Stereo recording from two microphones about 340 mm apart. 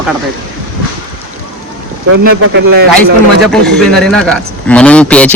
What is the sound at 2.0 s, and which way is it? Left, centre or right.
Speech, right.